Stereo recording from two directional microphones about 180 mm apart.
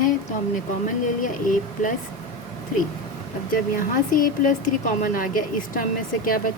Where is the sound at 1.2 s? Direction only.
45° left (ahead or behind).